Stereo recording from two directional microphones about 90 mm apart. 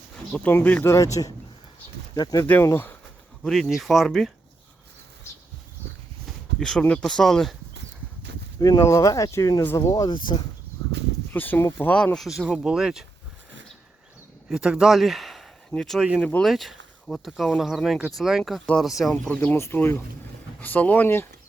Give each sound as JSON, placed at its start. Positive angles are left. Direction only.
{"t": 0.4, "sound": "speech", "side_deg": 20}
{"t": 0.9, "sound": "speech", "side_deg": 40}
{"t": 2.1, "sound": "speech", "side_deg": 50}
{"t": 2.4, "sound": "speech", "side_deg": 25}
{"t": 3.4, "sound": "speech", "side_deg": 0}
{"t": 6.6, "sound": "speech", "side_deg": 10}
{"t": 8.5, "sound": "speech", "side_deg": 45}
{"t": 10.1, "sound": "speech", "side_deg": 55}
{"t": 11.3, "sound": "speech", "side_deg": 25}
{"t": 12.1, "sound": "speech", "side_deg": 0}
{"t": 14.5, "sound": "speech", "side_deg": -10}
{"t": 19.3, "sound": "speech", "side_deg": 15}
{"t": 19.5, "sound": "speech", "side_deg": 30}